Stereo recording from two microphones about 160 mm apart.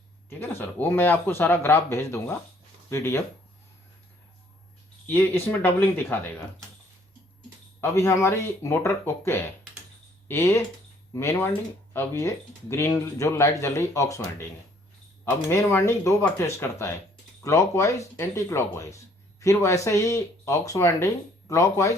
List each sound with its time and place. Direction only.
0.3 s speech: 10° left (ahead or behind)
5.0 s speech: 10° left (ahead or behind)
7.8 s speech: 15° left (ahead or behind)
15.4 s speech: 15° left (ahead or behind)